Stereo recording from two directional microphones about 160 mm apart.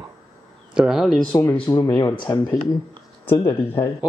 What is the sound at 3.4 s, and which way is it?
Speech, 25° left (ahead or behind).